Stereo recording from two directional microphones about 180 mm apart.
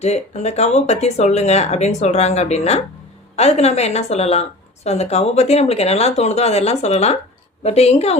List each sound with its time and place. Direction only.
0.0 s a woman's voice: 35° left (ahead or behind)